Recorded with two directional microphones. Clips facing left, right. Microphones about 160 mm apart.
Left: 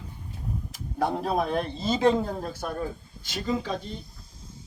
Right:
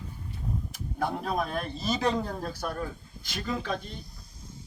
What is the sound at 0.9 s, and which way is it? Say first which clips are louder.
A man's voice: left 4 dB; 30° left (ahead or behind).